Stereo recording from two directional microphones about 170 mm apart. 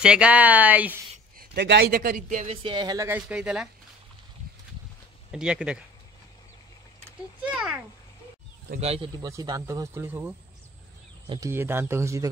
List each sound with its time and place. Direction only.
0.0 s speech: 5° right (ahead or behind)
1.4 s speech: 75° right (ahead or behind); by 2.5 s 50° right (ahead or behind)
2.5 s speech: 30° right (ahead or behind)
3.1 s speech: 10° right (ahead or behind)
5.3 s speech: 5° right (ahead or behind)
7.1 s a sound: 5° right (ahead or behind)
8.8 s speech: 35° right (ahead or behind)
9.2 s speech: 20° right (ahead or behind)